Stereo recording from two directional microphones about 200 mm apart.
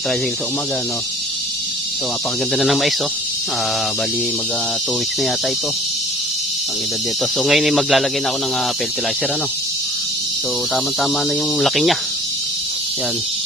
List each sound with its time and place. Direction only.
2.5 s speech: centre (ahead or behind)
7.4 s speech: centre (ahead or behind)
11.6 s speech: centre (ahead or behind)